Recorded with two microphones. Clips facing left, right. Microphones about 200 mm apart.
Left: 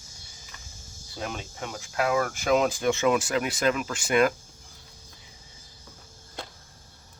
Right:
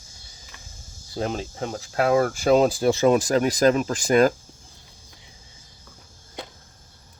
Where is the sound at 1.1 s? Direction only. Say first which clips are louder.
Right 8 dB; 35° right (ahead or behind).